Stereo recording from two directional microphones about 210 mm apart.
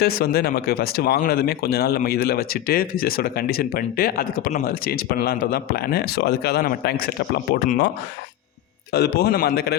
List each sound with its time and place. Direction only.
0.0 s speech: 45° left (ahead or behind)
8.9 s speech: 50° left (ahead or behind)